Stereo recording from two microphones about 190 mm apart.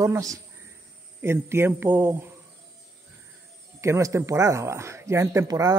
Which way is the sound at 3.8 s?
15° right (ahead or behind).